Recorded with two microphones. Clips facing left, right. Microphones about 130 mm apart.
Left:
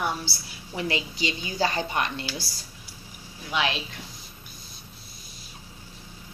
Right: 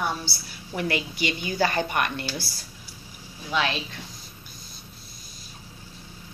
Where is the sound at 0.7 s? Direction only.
25° left (ahead or behind).